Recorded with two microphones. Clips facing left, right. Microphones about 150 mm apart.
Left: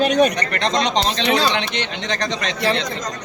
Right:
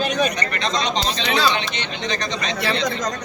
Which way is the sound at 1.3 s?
40° left (ahead or behind).